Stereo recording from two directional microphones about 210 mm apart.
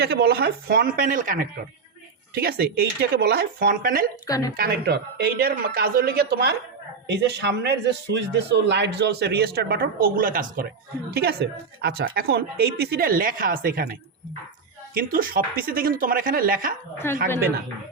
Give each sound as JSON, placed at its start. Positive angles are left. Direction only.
{"t": 0.0, "sound": "speech", "side_deg": -50}
{"t": 4.3, "sound": "speech", "side_deg": 15}
{"t": 4.5, "sound": "speech", "side_deg": -45}
{"t": 14.9, "sound": "speech", "side_deg": -45}
{"t": 17.0, "sound": "speech", "side_deg": 10}